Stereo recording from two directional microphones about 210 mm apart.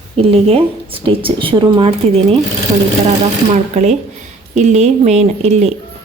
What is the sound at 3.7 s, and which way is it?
Speech, 35° right (ahead or behind).